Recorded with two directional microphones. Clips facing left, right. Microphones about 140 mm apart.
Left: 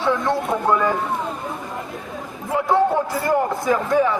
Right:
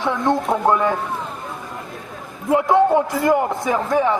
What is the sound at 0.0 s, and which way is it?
Speech, 15° right (ahead or behind).